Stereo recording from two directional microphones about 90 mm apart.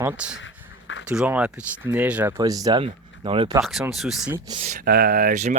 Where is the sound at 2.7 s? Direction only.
85° right.